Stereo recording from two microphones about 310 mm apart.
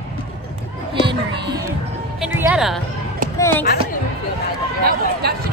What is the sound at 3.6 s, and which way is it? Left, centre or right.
Speech, left.